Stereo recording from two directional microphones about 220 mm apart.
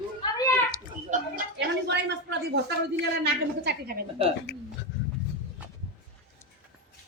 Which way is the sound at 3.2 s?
50° right (ahead or behind).